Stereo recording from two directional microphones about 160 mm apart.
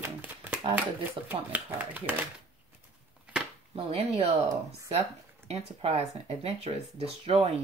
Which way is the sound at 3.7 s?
40° right (ahead or behind).